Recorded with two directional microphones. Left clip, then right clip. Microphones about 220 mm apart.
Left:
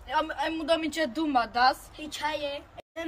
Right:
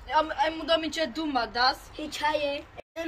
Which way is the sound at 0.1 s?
35° left (ahead or behind).